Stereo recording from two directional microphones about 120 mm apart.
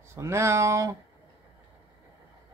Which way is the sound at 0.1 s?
20° right (ahead or behind).